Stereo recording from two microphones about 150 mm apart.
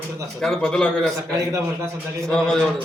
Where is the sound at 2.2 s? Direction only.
5° left (ahead or behind).